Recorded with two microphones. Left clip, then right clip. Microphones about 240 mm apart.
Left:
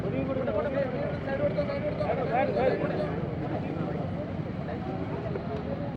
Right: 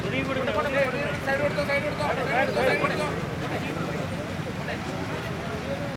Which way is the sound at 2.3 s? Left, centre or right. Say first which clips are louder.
Right 3 dB; centre.